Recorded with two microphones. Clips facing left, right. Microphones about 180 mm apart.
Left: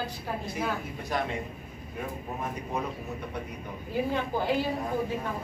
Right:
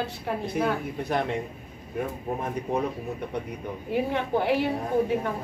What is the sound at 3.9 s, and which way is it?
A woman's voice, 65° right (ahead or behind).